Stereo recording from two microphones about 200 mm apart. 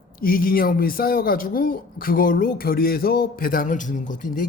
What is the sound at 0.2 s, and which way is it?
Speech, 45° left (ahead or behind).